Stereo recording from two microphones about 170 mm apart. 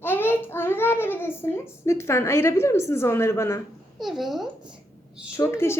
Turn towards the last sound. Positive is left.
turn(degrees=15)  # may be behind; listen again after turning